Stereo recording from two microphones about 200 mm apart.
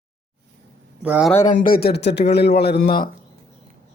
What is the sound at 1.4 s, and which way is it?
A man's voice, 45° left (ahead or behind).